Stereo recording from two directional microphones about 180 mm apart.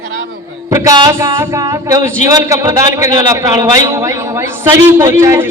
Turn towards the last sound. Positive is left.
turn(degrees=-15)  # may be behind; listen again after turning